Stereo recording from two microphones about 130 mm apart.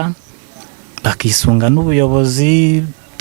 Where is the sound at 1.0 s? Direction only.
15° right (ahead or behind).